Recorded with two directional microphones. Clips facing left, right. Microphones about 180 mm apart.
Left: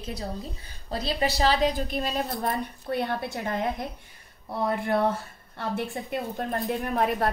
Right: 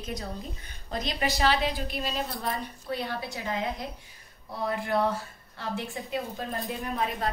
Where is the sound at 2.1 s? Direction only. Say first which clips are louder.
Left 4 dB; 55° left (ahead or behind).